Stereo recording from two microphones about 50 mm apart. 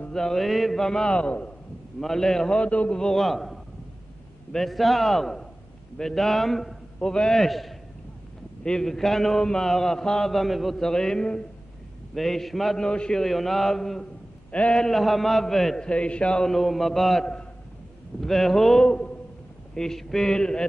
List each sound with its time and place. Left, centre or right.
0.1 s a man's voice: centre
1.1 s a man's voice: left
2.0 s a man's voice: centre
2.6 s a man's voice: left
3.0 s a man's voice: centre
12.1 s a man's voice: centre
12.7 s a man's voice: centre
13.2 s a man's voice: centre
15.8 s a man's voice: left
16.4 s a man's voice: centre